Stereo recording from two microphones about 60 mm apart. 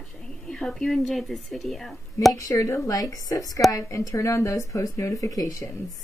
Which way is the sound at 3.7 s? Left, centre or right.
Left.